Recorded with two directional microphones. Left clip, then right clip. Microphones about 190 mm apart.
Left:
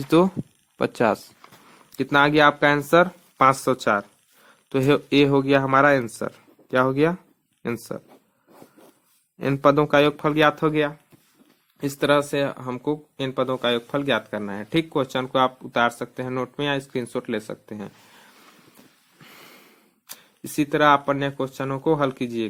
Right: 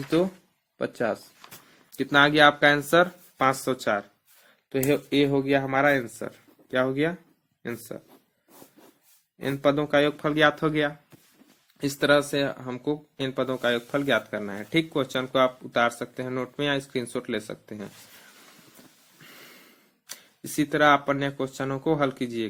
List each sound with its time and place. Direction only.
0.8 s speech: 40° left (ahead or behind)
2.0 s speech: 30° left (ahead or behind)
9.4 s speech: 40° left (ahead or behind)
19.2 s snort: 30° left (ahead or behind)
20.1 s speech: 25° left (ahead or behind)